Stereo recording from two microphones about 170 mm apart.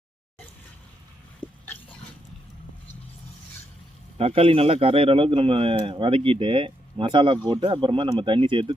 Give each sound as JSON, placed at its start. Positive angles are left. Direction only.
{"t": 1.4, "sound": "pig", "side_deg": 30}
{"t": 4.2, "sound": "a man's voice", "side_deg": -35}